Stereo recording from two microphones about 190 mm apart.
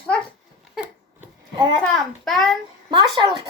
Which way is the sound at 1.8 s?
Centre (ahead or behind).